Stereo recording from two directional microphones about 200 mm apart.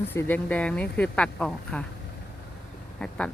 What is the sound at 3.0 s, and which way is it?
Speech, 5° left (ahead or behind).